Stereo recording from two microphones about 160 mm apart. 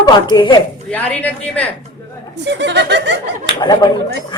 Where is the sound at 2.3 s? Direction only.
90° right.